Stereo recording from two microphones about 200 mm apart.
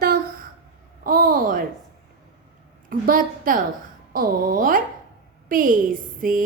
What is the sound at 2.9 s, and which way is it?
A woman's voice, 45° right (ahead or behind).